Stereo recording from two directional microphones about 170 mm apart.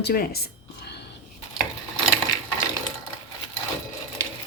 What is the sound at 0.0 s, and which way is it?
Speech, 60° left (ahead or behind).